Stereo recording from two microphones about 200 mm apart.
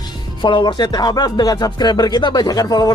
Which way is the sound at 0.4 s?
25° left (ahead or behind).